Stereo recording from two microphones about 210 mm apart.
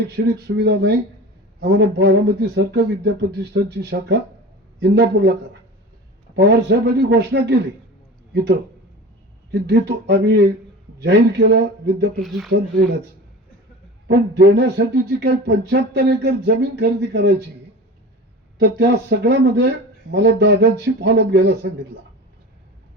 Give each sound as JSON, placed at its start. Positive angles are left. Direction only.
{"t": 0.4, "sound": "speech", "side_deg": -50}
{"t": 6.3, "sound": "speech", "side_deg": -50}
{"t": 9.5, "sound": "speech", "side_deg": -55}
{"t": 12.2, "sound": "speech", "side_deg": 0}
{"t": 14.1, "sound": "speech", "side_deg": -50}
{"t": 18.6, "sound": "speech", "side_deg": -50}